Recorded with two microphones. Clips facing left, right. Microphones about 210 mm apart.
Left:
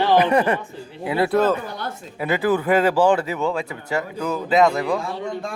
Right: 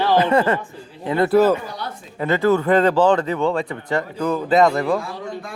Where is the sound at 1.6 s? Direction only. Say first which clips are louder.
Left 1 dB; 50° left (ahead or behind).